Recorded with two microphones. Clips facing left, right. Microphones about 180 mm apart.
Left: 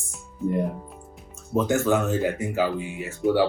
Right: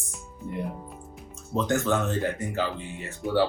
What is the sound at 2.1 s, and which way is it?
Speech, 5° left (ahead or behind).